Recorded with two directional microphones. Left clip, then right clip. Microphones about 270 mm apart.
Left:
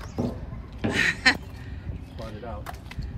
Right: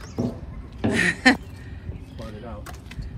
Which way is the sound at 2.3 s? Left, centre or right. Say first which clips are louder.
Left 2 dB; left.